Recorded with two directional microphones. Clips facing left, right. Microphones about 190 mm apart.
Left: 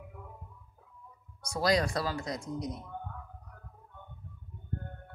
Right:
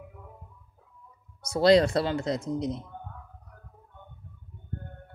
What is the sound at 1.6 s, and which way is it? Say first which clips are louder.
Speech: right 8 dB; 25° right (ahead or behind).